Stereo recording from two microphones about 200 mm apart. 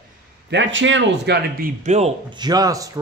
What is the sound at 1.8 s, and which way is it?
Speech, 35° right (ahead or behind).